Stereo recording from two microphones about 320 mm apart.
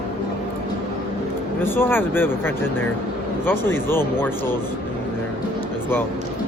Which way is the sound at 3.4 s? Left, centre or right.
Centre.